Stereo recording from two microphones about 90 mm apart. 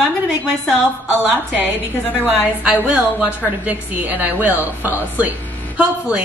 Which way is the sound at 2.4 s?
15° right (ahead or behind).